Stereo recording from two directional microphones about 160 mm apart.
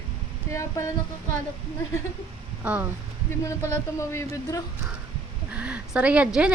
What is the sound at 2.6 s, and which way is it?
Speech, 5° right (ahead or behind).